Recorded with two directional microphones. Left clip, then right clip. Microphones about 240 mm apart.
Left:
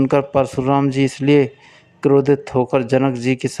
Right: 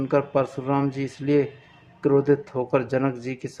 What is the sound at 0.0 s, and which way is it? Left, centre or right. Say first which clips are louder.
Speech: left 6 dB; left.